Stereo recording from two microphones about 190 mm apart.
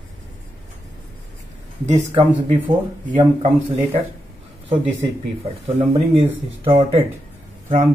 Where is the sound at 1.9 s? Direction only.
40° right (ahead or behind).